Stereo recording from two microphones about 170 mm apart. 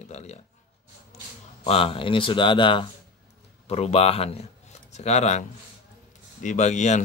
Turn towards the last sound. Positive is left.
turn(degrees=45)  # may be behind; listen again after turning